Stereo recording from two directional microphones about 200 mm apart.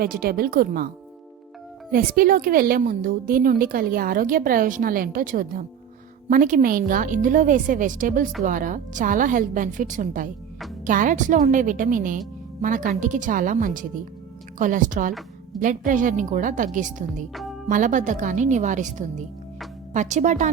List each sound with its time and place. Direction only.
0.0 s a woman's voice: 50° right (ahead or behind)
1.9 s a woman's voice: 45° right (ahead or behind)